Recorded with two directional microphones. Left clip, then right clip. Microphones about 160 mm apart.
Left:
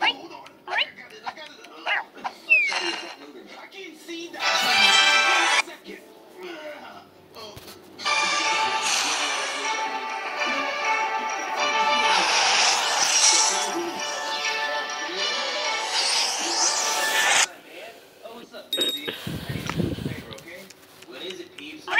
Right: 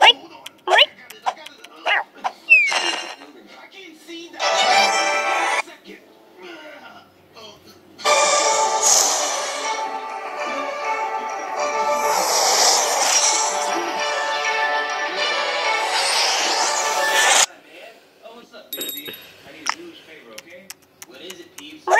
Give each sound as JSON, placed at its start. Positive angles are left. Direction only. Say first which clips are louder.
{"t": 0.0, "sound": "a sound", "louder": "right 11 dB", "side_deg": -45}
{"t": 4.4, "sound": "music", "louder": "right 4 dB", "side_deg": -40}
{"t": 4.8, "sound": "music", "louder": "left 1 dB", "side_deg": -25}
{"t": 8.0, "sound": "music", "louder": "right 6 dB", "side_deg": -45}
{"t": 9.8, "sound": "music", "louder": "right 1 dB", "side_deg": -20}
{"t": 12.3, "sound": "music", "louder": "right 3 dB", "side_deg": -45}
{"t": 18.8, "sound": "a sound", "louder": "left 5 dB", "side_deg": 10}